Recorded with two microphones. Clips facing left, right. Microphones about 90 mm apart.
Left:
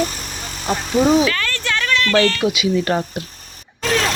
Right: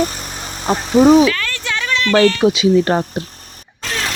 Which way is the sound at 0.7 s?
35° right (ahead or behind).